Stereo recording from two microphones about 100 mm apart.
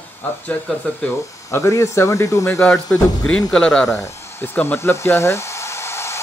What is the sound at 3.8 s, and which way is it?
Speech, 30° left (ahead or behind).